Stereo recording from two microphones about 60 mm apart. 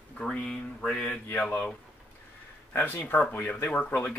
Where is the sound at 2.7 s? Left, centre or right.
Left.